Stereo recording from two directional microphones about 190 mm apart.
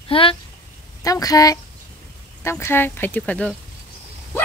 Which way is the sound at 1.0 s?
20° left (ahead or behind).